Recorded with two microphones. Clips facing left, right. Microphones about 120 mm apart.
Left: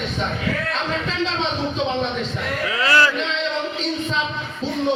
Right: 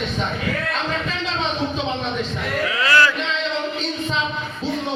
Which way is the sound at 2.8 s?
30° left (ahead or behind).